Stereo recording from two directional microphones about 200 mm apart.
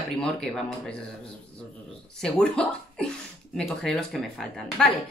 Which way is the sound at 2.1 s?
5° left (ahead or behind).